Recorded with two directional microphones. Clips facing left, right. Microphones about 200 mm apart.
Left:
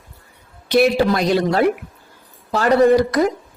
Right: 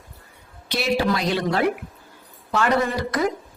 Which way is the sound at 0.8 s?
45° left (ahead or behind).